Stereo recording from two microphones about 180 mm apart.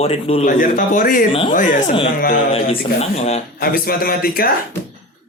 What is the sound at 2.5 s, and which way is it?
Speech, 35° left (ahead or behind).